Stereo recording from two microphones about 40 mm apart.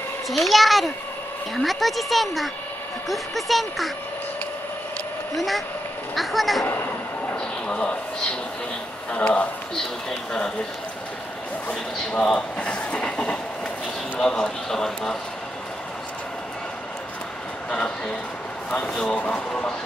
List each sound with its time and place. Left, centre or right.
0.3 s speech: centre
5.3 s speech: centre
7.3 s a man's voice: left
12.1 s speech: centre
12.5 s train: left
14.2 s speech: centre
17.6 s speech: left
19.1 s a man's voice: left